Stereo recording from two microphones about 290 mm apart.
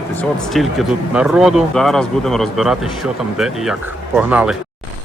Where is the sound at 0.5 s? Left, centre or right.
Centre.